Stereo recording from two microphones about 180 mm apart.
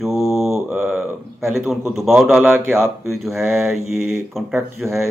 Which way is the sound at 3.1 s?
Centre (ahead or behind).